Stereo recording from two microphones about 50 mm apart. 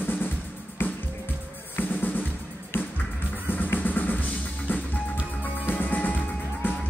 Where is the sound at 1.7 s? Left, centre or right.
Left.